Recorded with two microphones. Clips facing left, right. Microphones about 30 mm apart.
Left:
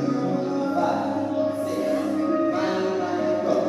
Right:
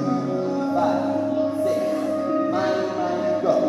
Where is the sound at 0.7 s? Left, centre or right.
Centre.